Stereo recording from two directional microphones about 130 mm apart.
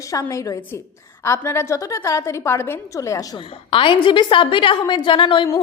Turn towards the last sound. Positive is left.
turn(degrees=40)  # may be behind; listen again after turning